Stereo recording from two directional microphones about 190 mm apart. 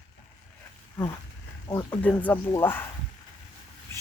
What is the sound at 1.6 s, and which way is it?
Speech, 10° left (ahead or behind).